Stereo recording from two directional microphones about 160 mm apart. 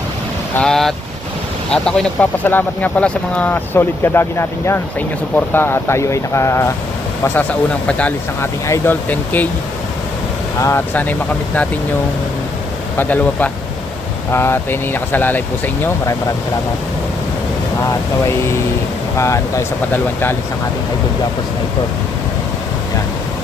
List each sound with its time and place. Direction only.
0.5 s speech: 5° left (ahead or behind)
7.9 s speech: 10° left (ahead or behind)
10.6 s speech: 15° left (ahead or behind)
13.0 s speech: 10° left (ahead or behind)
18.3 s speech: 15° left (ahead or behind)